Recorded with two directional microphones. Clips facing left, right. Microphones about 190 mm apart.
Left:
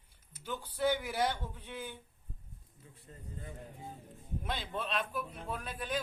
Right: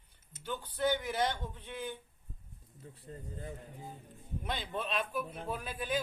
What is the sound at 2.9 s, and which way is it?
Speech, 35° right (ahead or behind).